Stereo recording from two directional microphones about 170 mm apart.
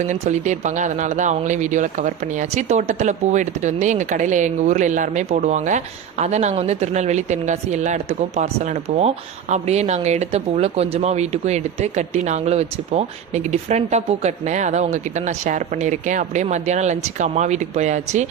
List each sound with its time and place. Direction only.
0.1 s speech: 45° right (ahead or behind)